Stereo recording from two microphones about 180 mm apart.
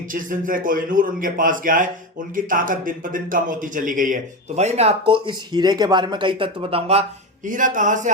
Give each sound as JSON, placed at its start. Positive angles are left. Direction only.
{"t": 0.1, "sound": "speech", "side_deg": -50}
{"t": 7.4, "sound": "speech", "side_deg": -45}